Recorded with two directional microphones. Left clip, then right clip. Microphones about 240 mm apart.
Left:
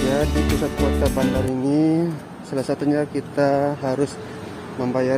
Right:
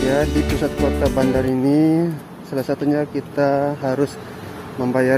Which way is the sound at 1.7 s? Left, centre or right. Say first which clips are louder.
Right 1 dB; centre.